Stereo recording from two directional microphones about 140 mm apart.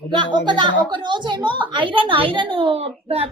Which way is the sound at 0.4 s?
35° right (ahead or behind).